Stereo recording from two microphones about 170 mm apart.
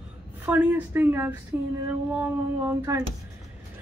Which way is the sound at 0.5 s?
10° right (ahead or behind).